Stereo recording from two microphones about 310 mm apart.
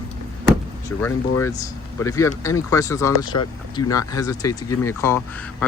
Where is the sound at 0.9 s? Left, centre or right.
Centre.